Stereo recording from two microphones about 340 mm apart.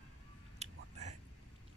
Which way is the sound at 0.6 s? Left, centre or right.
Centre.